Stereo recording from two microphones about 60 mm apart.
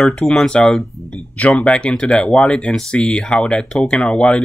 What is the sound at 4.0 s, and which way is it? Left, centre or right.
Speech, centre.